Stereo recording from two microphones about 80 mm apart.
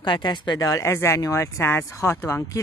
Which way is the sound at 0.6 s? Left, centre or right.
Left.